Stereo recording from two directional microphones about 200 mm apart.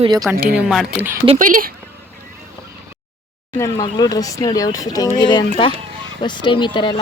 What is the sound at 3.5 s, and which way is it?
Speech, 15° left (ahead or behind).